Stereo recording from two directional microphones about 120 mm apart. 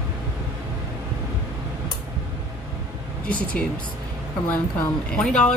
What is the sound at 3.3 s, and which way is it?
Speech, 10° left (ahead or behind).